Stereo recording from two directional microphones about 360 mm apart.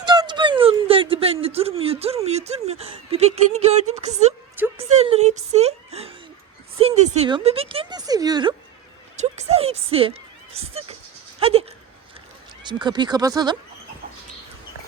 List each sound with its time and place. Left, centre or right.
0.0 s a sound: centre
11.3 s goat: centre
12.6 s speech: centre